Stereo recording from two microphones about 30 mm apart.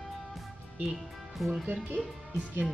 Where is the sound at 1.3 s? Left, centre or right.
Centre.